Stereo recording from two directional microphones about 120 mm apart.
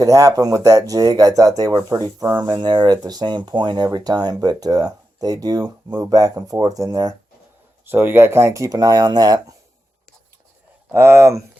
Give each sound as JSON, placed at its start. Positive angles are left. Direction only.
{"t": 0.0, "sound": "speech", "side_deg": -30}
{"t": 7.9, "sound": "speech", "side_deg": -20}
{"t": 10.9, "sound": "speech", "side_deg": -20}